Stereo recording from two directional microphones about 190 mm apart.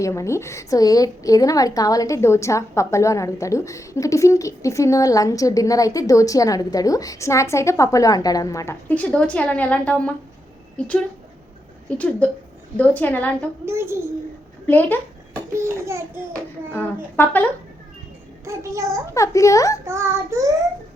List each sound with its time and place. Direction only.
0.0 s a woman's voice: 15° left (ahead or behind)
13.7 s child singing: 15° right (ahead or behind)
14.7 s a woman's voice: 10° left (ahead or behind)
15.5 s child singing: 15° right (ahead or behind)
16.3 s a woman's voice: 10° left (ahead or behind)
18.4 s child singing: 15° right (ahead or behind)
19.1 s a woman's voice: 15° left (ahead or behind)
19.8 s child singing: 15° right (ahead or behind)